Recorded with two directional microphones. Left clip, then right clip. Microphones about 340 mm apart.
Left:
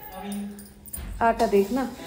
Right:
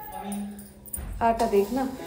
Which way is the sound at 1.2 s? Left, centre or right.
Centre.